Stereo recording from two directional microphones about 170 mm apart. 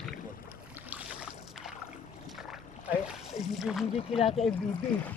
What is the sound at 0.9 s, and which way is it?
Boat, 10° right (ahead or behind).